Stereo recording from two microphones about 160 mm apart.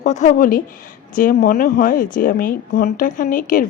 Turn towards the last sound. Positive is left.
turn(degrees=55)  # may be behind; listen again after turning